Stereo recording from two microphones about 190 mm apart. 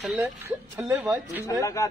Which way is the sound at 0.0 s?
10° right (ahead or behind).